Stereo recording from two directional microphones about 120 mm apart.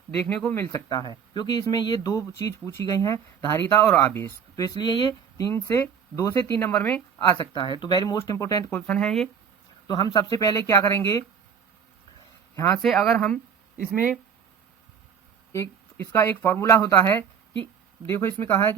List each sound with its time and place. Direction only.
0.3 s speech: 5° left (ahead or behind)
0.5 s speech: 20° left (ahead or behind)
0.9 s speech: 35° left (ahead or behind)
6.7 s speech: 10° left (ahead or behind)
7.5 s speech: 40° left (ahead or behind)
8.7 s speech: 10° left (ahead or behind)
9.8 s speech: 35° left (ahead or behind)
12.7 s speech: centre (ahead or behind)
13.7 s speech: 10° right (ahead or behind)
15.5 s speech: 15° left (ahead or behind)